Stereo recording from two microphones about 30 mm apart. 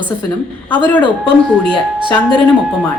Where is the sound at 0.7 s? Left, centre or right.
Left.